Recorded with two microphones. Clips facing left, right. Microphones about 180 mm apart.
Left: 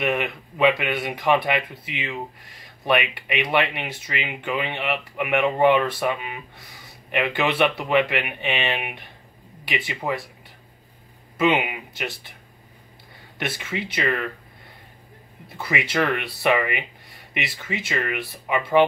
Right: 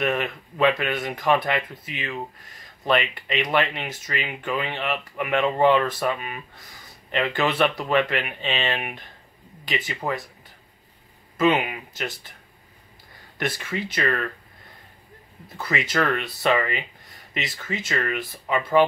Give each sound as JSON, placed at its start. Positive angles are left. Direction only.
{"t": 0.0, "sound": "speech", "side_deg": 15}
{"t": 10.0, "sound": "speech", "side_deg": 5}
{"t": 11.3, "sound": "speech", "side_deg": 10}
{"t": 13.4, "sound": "speech", "side_deg": 25}
{"t": 15.5, "sound": "speech", "side_deg": 15}